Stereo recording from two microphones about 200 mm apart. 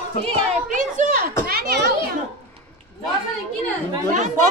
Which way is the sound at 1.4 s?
50° right (ahead or behind).